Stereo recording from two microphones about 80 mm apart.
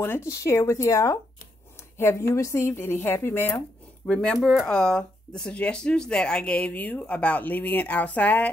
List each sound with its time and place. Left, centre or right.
0.0 s speech: left; by 4.3 s centre
4.3 s speech: centre